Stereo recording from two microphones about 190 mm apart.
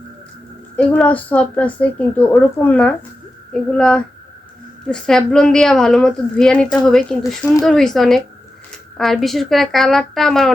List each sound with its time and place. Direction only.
0.8 s a woman's voice: 5° left (ahead or behind)